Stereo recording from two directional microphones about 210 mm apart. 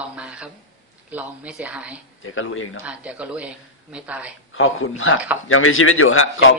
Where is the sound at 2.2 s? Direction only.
70° left (ahead or behind).